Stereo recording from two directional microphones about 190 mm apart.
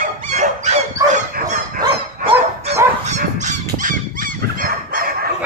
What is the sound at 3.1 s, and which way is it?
Honk, 40° right (ahead or behind).